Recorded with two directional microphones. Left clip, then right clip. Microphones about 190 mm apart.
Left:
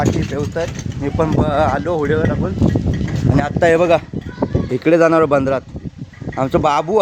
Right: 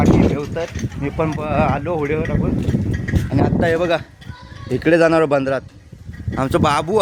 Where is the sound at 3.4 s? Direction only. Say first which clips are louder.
Left 4 dB; 45° left (ahead or behind).